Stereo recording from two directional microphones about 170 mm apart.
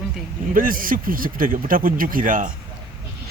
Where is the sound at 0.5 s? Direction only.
55° right (ahead or behind).